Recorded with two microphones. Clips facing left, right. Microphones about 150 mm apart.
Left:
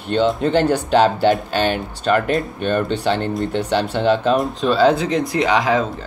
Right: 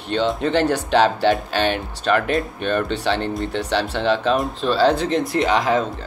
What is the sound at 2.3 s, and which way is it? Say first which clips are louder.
Speech: left 2 dB; centre (ahead or behind).